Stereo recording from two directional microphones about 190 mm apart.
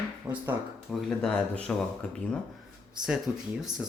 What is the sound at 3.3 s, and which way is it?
Speech, 10° right (ahead or behind).